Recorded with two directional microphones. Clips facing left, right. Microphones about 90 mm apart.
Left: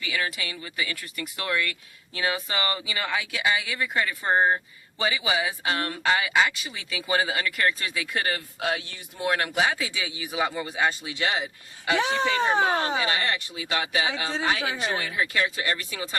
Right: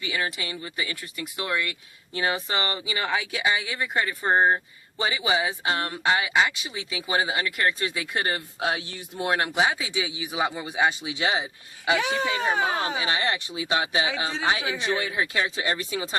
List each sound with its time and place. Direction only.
0.0 s a man's voice: 25° right (ahead or behind)
11.9 s speech: 35° left (ahead or behind)
13.0 s speech: 20° right (ahead or behind)